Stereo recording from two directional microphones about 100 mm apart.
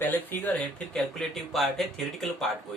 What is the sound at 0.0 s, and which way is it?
Speech, 20° left (ahead or behind).